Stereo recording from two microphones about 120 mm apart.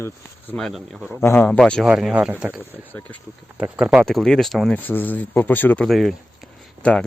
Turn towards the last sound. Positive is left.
turn(degrees=10)  # may be behind; listen again after turning